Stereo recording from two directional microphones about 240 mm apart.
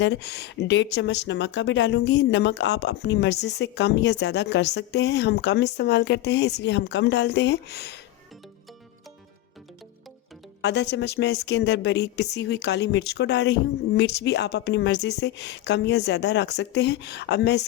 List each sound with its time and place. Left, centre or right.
0.0 s speech: left
10.6 s speech: left